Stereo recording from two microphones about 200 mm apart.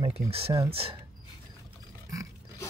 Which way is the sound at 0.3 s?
30° right (ahead or behind).